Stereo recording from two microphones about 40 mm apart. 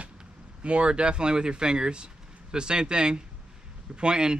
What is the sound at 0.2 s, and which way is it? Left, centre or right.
Speech, right.